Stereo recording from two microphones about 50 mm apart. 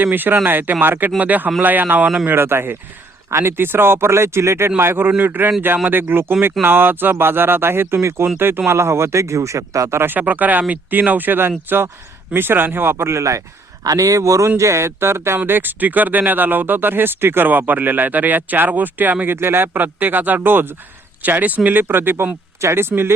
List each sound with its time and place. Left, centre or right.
0.0 s speech: right
3.2 s speech: right
3.6 s speech: right
4.8 s speech: right
8.7 s speech: right
10.0 s speech: right
14.6 s speech: right
15.4 s speech: right
21.2 s speech: right